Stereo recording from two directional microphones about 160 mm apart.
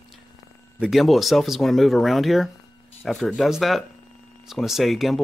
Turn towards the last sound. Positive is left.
turn(degrees=0)  # may be behind; listen again after turning